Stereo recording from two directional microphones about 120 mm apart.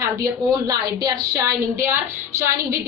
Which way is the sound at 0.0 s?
25° right (ahead or behind).